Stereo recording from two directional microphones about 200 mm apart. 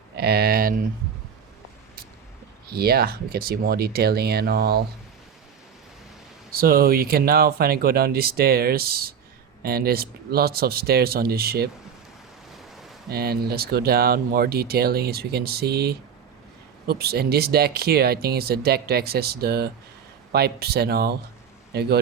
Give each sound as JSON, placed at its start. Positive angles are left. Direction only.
{"t": 0.2, "sound": "speech", "side_deg": -50}
{"t": 2.6, "sound": "speech", "side_deg": -50}
{"t": 6.5, "sound": "speech", "side_deg": -50}
{"t": 13.1, "sound": "speech", "side_deg": -50}